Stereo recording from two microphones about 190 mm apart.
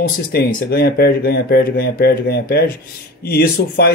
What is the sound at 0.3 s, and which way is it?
Speech, 55° left (ahead or behind).